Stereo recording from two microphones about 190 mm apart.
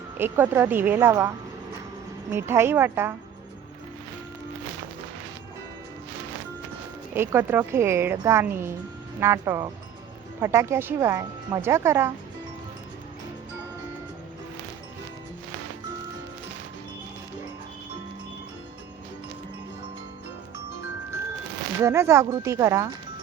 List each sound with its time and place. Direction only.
0.2 s a woman's voice: 10° right (ahead or behind)
2.3 s a woman's voice: 10° right (ahead or behind)
7.1 s a woman's voice: 10° right (ahead or behind)
21.8 s a woman's voice: 15° right (ahead or behind)